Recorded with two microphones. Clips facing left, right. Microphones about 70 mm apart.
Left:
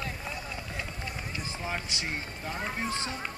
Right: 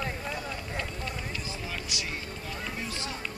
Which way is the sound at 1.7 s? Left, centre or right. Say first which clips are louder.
Left 4 dB; left.